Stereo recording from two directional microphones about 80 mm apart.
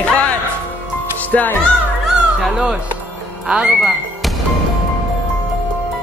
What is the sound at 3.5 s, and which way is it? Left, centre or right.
Speech, centre.